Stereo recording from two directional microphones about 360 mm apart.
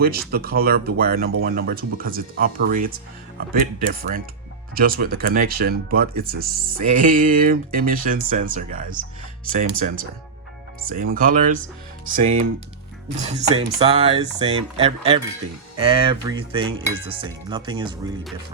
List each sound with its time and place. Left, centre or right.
0.3 s speech: right
12.2 s dishes: centre